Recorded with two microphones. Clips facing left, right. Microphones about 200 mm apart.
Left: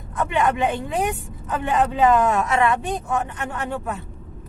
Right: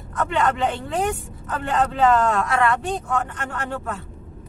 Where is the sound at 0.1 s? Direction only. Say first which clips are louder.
Left 1 dB; 15° left (ahead or behind).